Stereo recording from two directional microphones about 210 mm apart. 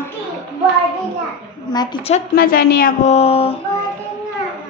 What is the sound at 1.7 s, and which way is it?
Speech, 25° left (ahead or behind).